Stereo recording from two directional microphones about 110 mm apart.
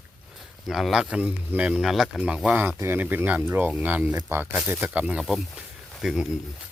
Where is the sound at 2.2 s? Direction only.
10° right (ahead or behind).